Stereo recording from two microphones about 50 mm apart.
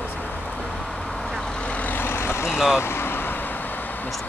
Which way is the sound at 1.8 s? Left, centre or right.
Left.